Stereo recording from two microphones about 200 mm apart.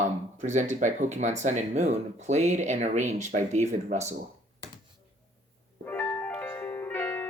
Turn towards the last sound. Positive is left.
turn(degrees=10)  # may be behind; listen again after turning